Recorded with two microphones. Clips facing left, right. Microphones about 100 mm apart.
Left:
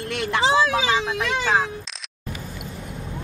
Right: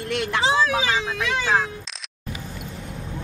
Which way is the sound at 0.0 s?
30° left (ahead or behind).